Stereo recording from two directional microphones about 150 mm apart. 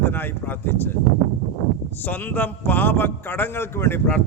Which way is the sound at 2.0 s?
10° left (ahead or behind).